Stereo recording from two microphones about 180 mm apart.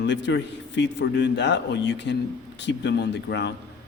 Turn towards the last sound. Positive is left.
turn(degrees=75)  # may be behind; listen again after turning